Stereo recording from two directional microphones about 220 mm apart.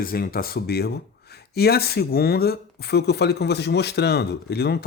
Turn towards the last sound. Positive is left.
turn(degrees=45)  # may be behind; listen again after turning